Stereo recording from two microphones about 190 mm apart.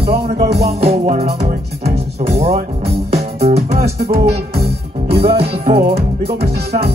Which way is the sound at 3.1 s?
35° right (ahead or behind).